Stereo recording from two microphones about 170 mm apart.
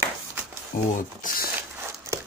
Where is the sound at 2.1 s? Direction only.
15° right (ahead or behind).